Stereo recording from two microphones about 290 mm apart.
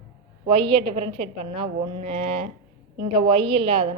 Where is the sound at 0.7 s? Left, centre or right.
Centre.